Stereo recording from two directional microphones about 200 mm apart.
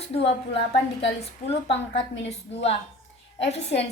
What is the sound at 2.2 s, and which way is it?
Speech, 30° left (ahead or behind).